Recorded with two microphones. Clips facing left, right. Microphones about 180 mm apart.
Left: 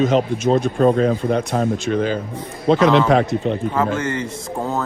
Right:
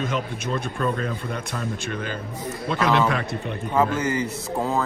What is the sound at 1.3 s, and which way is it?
Speech, 50° left (ahead or behind).